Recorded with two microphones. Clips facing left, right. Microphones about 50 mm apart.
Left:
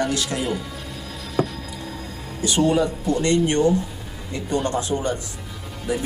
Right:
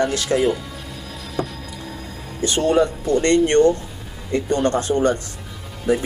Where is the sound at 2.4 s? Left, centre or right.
Right.